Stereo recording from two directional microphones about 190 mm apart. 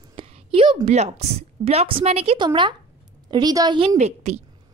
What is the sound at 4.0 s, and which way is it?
Speech, 35° right (ahead or behind).